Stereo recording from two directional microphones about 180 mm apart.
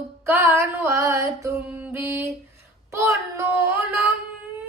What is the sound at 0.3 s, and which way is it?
Female singing, 15° right (ahead or behind).